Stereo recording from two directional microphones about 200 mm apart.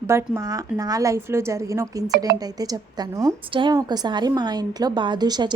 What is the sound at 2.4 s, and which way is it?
A woman's voice, 20° right (ahead or behind).